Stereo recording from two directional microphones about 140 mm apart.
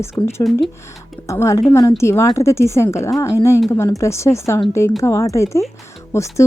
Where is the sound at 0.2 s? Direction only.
20° left (ahead or behind).